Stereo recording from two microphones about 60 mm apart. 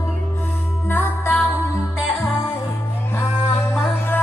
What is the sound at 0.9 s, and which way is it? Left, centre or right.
Music, left.